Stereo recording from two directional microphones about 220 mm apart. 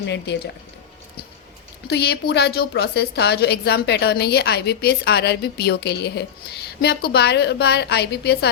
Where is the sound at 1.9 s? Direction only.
50° left (ahead or behind).